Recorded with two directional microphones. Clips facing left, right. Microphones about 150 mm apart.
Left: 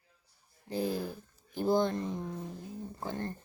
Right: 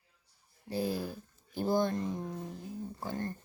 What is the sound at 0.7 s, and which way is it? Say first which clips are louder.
Speech: left 1 dB; 15° left (ahead or behind).